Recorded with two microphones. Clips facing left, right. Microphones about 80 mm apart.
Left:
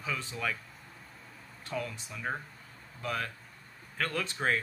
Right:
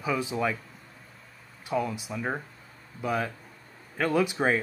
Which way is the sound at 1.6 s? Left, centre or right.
Centre.